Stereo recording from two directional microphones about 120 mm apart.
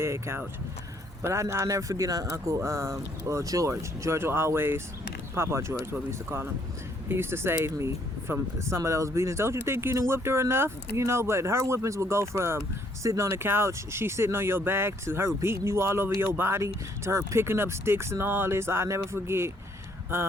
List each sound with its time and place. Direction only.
0.0 s speech: 20° right (ahead or behind)